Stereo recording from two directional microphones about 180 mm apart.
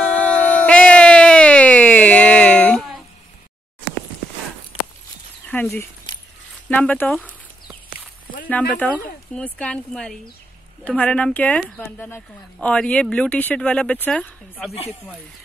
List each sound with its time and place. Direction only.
0.0 s a sound: 5° left (ahead or behind)
6.7 s speech: 10° left (ahead or behind)
8.5 s speech: 10° left (ahead or behind)
14.7 s speech: 35° left (ahead or behind)